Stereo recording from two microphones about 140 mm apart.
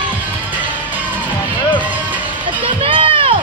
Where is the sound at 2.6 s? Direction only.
40° right (ahead or behind).